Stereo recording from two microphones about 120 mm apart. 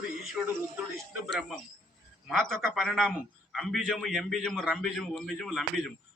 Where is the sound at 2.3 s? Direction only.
5° left (ahead or behind).